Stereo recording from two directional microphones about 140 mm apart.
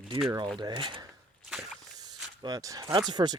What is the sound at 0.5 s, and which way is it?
Speech, 35° right (ahead or behind).